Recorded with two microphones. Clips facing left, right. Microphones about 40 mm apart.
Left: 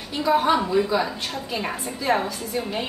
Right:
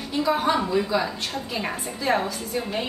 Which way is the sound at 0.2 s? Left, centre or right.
Centre.